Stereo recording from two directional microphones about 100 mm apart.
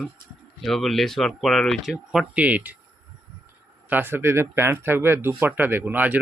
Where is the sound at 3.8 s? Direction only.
20° right (ahead or behind).